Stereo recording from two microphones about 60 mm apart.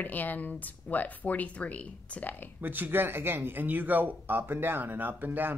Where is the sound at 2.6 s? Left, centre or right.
Right.